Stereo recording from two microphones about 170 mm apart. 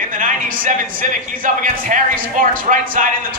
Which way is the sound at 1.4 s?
50° right (ahead or behind).